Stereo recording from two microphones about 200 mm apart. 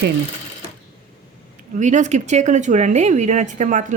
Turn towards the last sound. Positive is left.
turn(degrees=-40)  # may be behind; listen again after turning